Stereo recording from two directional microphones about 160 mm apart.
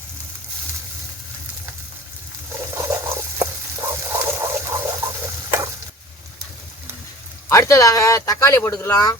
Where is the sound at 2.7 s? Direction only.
20° right (ahead or behind).